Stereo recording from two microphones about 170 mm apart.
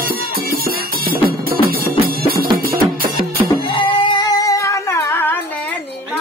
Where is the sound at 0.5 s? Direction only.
60° right (ahead or behind).